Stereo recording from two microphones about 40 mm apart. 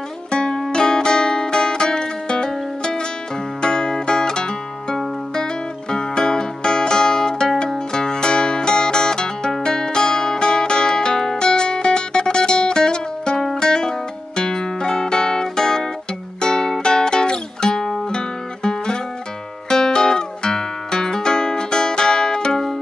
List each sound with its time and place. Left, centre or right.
0.3 s music: left